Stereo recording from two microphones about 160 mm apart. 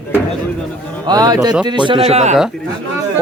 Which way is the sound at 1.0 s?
25° right (ahead or behind).